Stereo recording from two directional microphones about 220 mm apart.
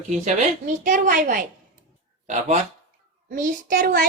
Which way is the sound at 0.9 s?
40° right (ahead or behind).